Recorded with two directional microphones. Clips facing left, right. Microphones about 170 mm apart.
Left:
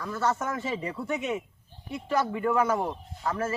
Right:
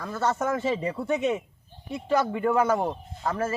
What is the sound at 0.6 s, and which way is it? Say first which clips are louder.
A man's voice: right 5 dB; 30° right (ahead or behind).